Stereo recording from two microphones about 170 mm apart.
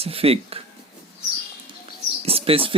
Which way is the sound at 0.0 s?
35° right (ahead or behind).